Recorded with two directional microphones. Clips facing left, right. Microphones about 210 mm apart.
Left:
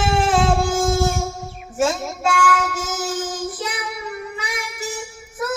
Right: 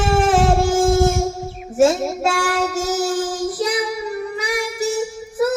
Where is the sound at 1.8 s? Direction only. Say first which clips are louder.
Right 5 dB; 35° right (ahead or behind).